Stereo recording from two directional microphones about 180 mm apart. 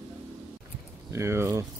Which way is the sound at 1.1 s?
15° right (ahead or behind).